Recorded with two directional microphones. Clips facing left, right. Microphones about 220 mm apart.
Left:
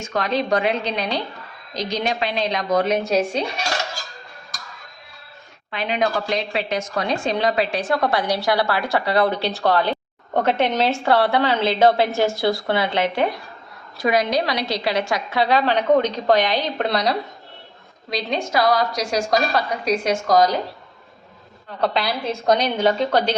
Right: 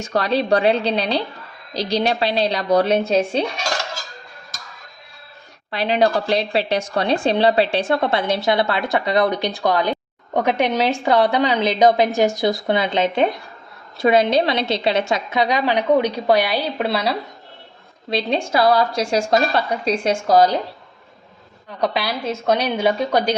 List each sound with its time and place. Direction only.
0.0 s a woman's voice: 35° right (ahead or behind)
5.7 s a woman's voice: 35° right (ahead or behind); by 17.2 s 5° right (ahead or behind)
18.1 s a woman's voice: 30° right (ahead or behind)
21.8 s a woman's voice: 10° right (ahead or behind)